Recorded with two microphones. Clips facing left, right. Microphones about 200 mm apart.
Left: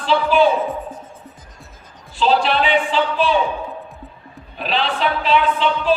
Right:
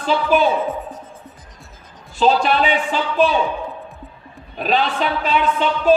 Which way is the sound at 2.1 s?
45° right (ahead or behind).